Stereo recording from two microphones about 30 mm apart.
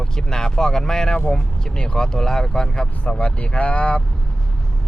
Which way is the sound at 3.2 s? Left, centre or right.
Left.